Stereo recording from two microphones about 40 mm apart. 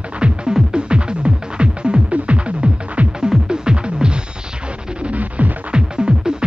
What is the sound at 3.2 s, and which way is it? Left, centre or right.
Music, centre.